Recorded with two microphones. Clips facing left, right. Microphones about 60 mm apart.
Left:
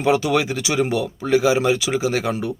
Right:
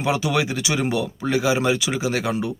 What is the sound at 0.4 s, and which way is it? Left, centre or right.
Speech, left.